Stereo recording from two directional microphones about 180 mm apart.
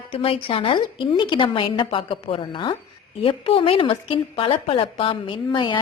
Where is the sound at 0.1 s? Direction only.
30° left (ahead or behind).